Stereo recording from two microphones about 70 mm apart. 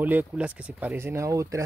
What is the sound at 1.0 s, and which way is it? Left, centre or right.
Speech, right.